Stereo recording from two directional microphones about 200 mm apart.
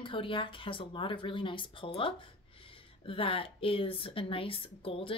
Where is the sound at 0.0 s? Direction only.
25° left (ahead or behind).